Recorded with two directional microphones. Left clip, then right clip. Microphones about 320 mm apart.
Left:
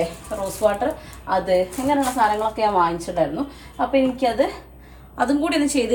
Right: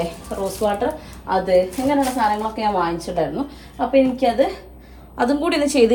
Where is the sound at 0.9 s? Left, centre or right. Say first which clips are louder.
Right 1 dB; centre.